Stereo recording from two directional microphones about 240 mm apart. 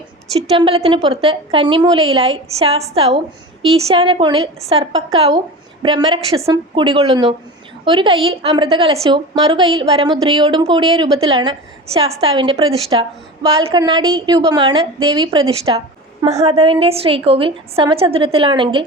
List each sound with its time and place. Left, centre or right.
0.5 s a woman's voice: right